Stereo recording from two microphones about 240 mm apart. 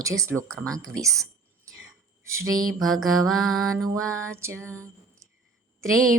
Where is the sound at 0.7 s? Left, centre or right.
Centre.